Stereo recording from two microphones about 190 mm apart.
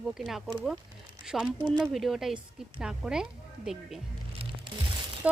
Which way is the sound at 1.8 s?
Centre (ahead or behind).